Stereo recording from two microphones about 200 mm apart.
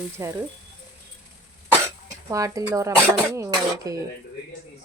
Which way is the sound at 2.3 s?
15° right (ahead or behind).